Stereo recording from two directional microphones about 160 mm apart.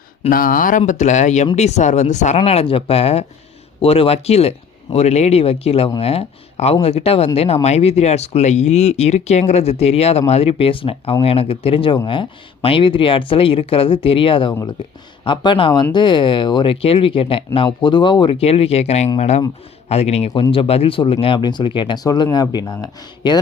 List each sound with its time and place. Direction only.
0.3 s speech: 60° left (ahead or behind)
0.8 s speech: 50° left (ahead or behind); by 23.4 s 25° left (ahead or behind)